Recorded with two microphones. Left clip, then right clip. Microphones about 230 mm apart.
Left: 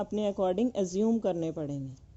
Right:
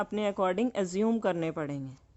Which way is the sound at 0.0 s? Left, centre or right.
Centre.